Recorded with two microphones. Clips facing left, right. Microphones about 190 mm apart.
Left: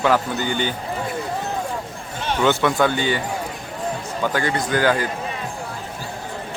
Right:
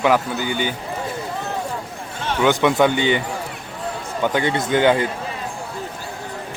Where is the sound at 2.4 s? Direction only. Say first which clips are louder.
Right 2 dB; 20° right (ahead or behind).